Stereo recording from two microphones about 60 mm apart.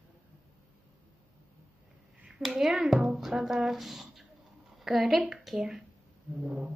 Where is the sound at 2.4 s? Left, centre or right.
Centre.